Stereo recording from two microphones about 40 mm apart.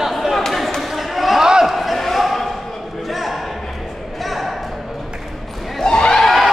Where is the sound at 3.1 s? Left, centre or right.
Centre.